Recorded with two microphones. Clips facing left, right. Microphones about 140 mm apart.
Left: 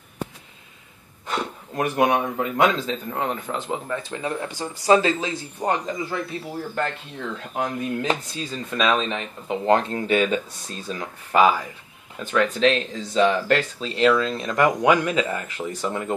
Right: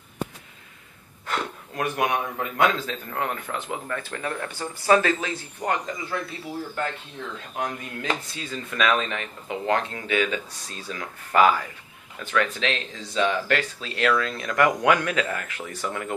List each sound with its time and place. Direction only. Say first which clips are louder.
1.2 s speech: left 2 dB; 20° left (ahead or behind)
7.5 s speech: left 6 dB; 30° left (ahead or behind)
10.9 s speech: left 3 dB; 20° left (ahead or behind)
12.3 s speech: left 6 dB; 35° left (ahead or behind)